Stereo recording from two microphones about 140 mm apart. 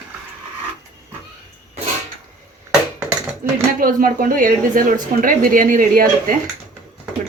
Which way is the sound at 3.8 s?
90° right.